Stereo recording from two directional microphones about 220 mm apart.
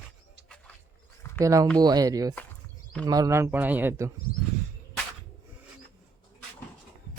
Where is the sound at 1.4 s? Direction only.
15° right (ahead or behind).